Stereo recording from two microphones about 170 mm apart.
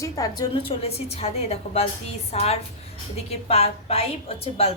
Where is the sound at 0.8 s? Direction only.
35° left (ahead or behind).